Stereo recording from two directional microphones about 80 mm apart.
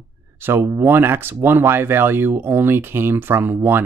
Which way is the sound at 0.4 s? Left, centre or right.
Right.